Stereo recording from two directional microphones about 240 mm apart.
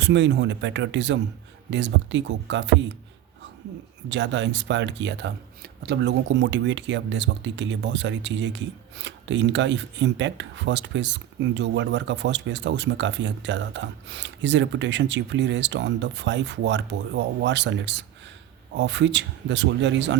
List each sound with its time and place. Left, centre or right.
0.0 s speech: right
4.1 s speech: right